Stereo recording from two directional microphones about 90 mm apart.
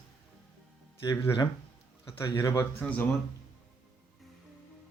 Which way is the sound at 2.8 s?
15° left (ahead or behind).